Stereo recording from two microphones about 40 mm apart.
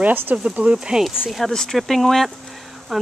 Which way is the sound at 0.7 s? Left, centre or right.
Centre.